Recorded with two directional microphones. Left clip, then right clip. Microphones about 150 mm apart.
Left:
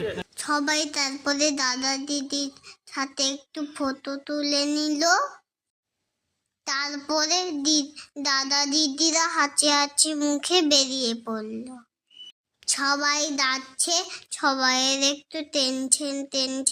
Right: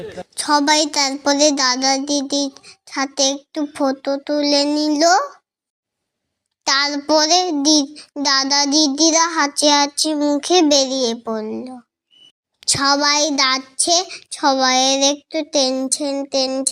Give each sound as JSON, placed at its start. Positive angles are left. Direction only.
{"t": 0.3, "sound": "a child's voice", "side_deg": -35}
{"t": 6.7, "sound": "a child's voice", "side_deg": -40}
{"t": 8.2, "sound": "child singing", "side_deg": -30}
{"t": 10.2, "sound": "child singing", "side_deg": -10}
{"t": 12.5, "sound": "child singing", "side_deg": -30}